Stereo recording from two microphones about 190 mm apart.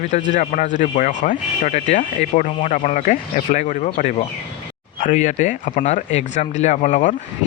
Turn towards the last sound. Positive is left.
turn(degrees=40)  # may be behind; listen again after turning